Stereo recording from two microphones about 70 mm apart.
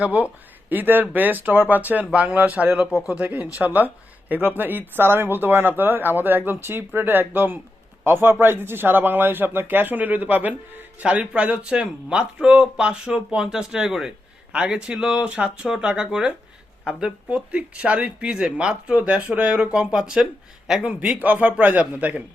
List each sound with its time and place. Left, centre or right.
0.0 s speech: right